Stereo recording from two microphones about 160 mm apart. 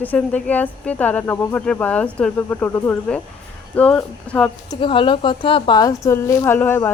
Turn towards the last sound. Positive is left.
turn(degrees=10)  # may be behind; listen again after turning